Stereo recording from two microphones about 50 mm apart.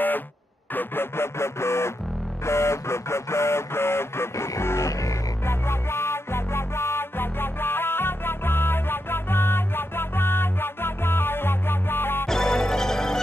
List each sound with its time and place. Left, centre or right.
0.7 s a sound: left
2.4 s music: left
5.5 s music: left
12.3 s music: centre